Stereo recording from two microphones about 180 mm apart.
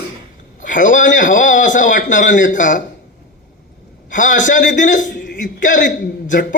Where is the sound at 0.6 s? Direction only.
45° left (ahead or behind).